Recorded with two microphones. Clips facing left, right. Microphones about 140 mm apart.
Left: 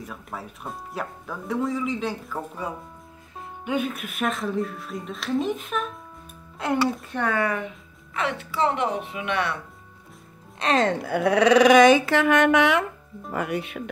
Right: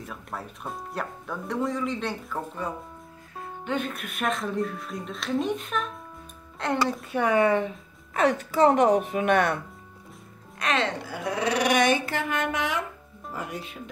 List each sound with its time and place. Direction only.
0.0 s speech: centre (ahead or behind)
7.1 s speech: 10° right (ahead or behind)
7.3 s speech: 25° right (ahead or behind)
8.1 s speech: 40° right (ahead or behind)
10.6 s speech: 35° left (ahead or behind)
10.9 s speech: 60° left (ahead or behind)